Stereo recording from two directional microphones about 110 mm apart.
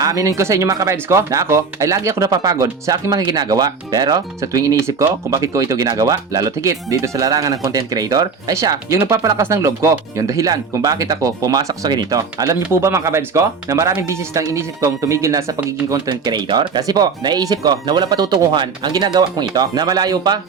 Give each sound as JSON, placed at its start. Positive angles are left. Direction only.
{"t": 0.0, "sound": "speech", "side_deg": -30}